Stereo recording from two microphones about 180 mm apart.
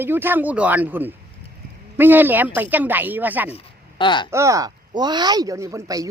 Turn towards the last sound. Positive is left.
turn(degrees=-20)  # may be behind; listen again after turning